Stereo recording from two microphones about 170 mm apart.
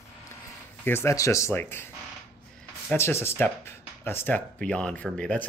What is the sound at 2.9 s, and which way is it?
Speech, 15° left (ahead or behind).